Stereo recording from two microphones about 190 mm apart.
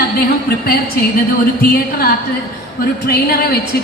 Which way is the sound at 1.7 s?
55° left (ahead or behind).